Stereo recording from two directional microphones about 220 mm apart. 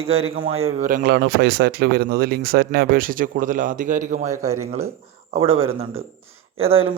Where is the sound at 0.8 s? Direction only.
40° right (ahead or behind).